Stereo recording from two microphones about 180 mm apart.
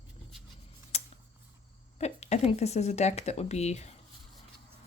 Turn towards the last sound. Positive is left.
turn(degrees=40)  # may be behind; listen again after turning